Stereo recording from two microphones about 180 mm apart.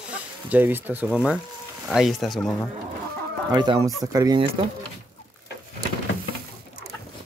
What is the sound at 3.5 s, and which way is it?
Speech, 25° right (ahead or behind).